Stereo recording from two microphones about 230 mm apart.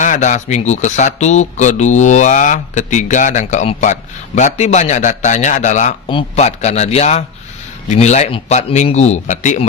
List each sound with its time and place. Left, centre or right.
0.0 s a man's voice: left